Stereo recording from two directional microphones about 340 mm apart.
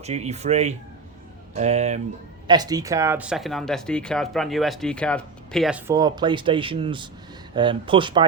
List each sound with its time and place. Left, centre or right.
0.0 s speech: centre